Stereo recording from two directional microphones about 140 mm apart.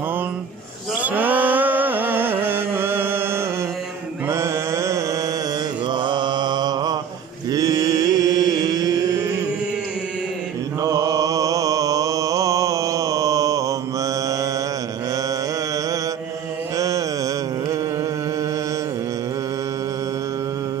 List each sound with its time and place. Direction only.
1.0 s music: 10° right (ahead or behind)
4.3 s mantra: 20° right (ahead or behind)
5.9 s mantra: 35° right (ahead or behind)
10.8 s mantra: 25° right (ahead or behind)
16.7 s mantra: 25° right (ahead or behind)